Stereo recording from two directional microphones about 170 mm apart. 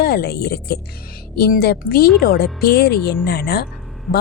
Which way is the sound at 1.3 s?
65° left (ahead or behind).